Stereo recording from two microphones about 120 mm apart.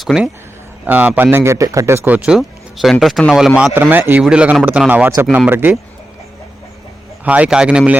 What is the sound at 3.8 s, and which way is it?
A man's voice, 15° right (ahead or behind).